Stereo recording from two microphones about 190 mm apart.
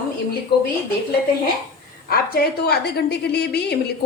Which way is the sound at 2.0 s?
55° left (ahead or behind).